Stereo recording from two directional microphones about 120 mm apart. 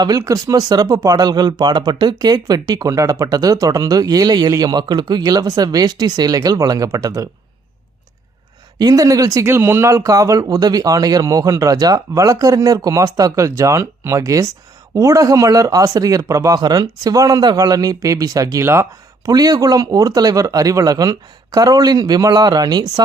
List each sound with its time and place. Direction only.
0.0 s speech: 30° right (ahead or behind)
8.8 s speech: 30° right (ahead or behind)